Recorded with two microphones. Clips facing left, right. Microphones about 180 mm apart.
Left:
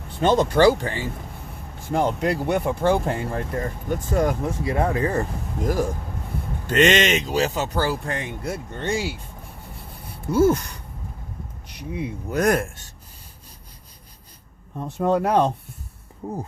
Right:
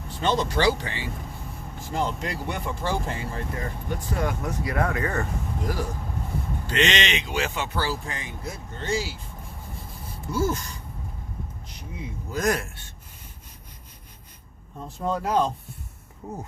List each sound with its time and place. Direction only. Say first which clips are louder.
0.1 s speech: left 6 dB; 50° left (ahead or behind)
4.4 s speech: left 3 dB; 25° left (ahead or behind)
5.6 s speech: left 8 dB; 45° left (ahead or behind)
7.9 s speech: left 5 dB; 55° left (ahead or behind)
10.3 s speech: left 8 dB; 60° left (ahead or behind)
14.8 s speech: left 7 dB; 65° left (ahead or behind)